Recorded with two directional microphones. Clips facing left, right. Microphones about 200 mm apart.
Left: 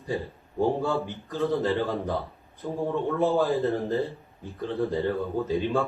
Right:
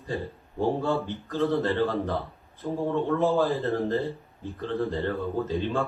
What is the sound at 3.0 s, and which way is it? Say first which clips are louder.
A man's voice: left 1 dB; 15° left (ahead or behind).